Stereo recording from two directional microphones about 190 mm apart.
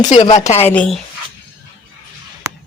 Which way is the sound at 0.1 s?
35° left (ahead or behind).